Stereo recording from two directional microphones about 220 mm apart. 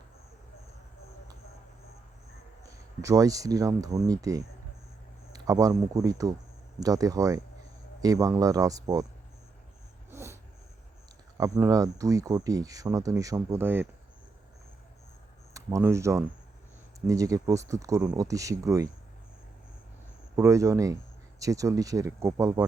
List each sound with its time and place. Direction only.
3.0 s speech: 15° right (ahead or behind)
10.1 s a sound: 10° right (ahead or behind)
11.3 s speech: 15° right (ahead or behind)
15.5 s speech: 15° right (ahead or behind)
20.3 s speech: 15° right (ahead or behind)